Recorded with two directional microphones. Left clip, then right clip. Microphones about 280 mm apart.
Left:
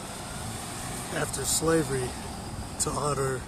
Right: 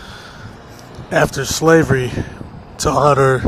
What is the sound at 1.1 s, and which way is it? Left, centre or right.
Speech, right.